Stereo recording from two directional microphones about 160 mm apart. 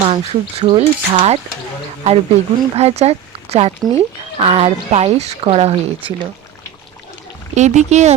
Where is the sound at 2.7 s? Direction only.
40° right (ahead or behind).